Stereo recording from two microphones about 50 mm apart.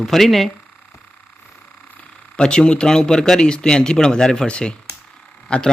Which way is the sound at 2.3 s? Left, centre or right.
Centre.